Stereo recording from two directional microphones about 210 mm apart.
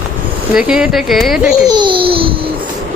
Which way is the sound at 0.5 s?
5° right (ahead or behind).